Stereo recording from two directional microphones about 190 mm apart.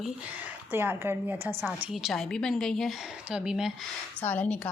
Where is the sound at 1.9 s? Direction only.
Centre (ahead or behind).